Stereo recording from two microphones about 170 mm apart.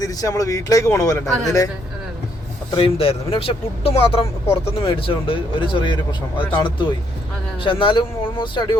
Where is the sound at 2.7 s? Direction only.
30° left (ahead or behind).